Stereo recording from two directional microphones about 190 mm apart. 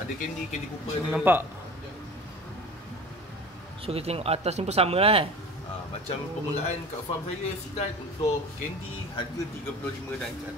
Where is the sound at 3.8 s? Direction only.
30° right (ahead or behind).